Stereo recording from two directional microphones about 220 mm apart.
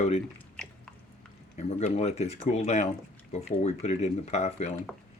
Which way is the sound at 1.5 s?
30° left (ahead or behind).